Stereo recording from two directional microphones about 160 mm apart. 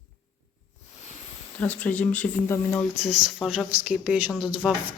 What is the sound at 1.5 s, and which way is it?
Speech, 10° left (ahead or behind).